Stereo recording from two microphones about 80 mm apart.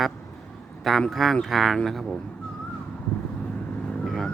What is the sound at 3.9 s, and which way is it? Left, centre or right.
Vehicle, centre.